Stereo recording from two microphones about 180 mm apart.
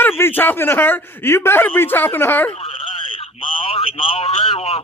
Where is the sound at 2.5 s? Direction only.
30° left (ahead or behind).